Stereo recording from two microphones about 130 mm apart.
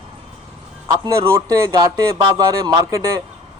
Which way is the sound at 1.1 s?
20° right (ahead or behind).